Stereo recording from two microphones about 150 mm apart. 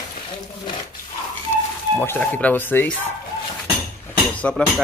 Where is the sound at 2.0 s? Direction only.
10° left (ahead or behind).